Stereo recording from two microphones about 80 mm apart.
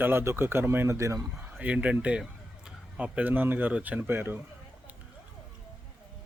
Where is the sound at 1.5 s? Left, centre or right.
Centre.